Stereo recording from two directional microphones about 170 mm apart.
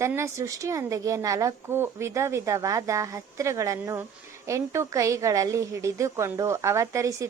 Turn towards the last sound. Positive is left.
turn(degrees=-20)  # may be behind; listen again after turning